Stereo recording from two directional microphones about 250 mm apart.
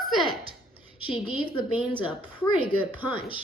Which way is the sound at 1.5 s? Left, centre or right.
Centre.